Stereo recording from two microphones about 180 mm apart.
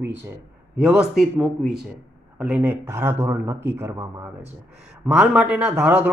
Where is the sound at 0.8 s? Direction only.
5° right (ahead or behind).